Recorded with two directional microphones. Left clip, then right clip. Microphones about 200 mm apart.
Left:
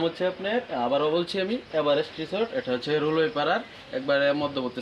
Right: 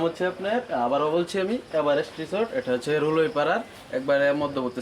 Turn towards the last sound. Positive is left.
turn(degrees=-20)  # may be behind; listen again after turning